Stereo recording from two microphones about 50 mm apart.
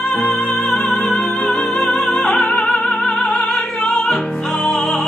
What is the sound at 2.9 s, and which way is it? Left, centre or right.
Music, left.